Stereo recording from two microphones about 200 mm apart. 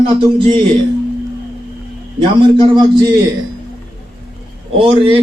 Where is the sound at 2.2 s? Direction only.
25° right (ahead or behind).